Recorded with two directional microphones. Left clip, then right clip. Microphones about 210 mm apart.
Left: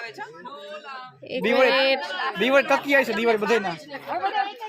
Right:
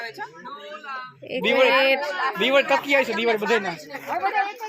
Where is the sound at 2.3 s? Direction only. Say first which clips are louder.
Even; 45° left (ahead or behind).